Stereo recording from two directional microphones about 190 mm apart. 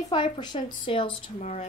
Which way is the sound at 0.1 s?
25° left (ahead or behind).